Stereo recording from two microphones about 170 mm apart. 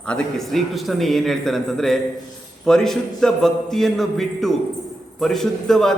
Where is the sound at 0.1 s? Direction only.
Centre (ahead or behind).